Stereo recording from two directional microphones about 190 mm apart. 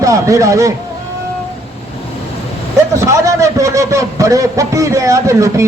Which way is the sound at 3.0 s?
15° right (ahead or behind).